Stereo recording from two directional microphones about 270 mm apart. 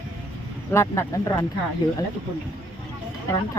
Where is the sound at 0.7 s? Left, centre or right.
Centre.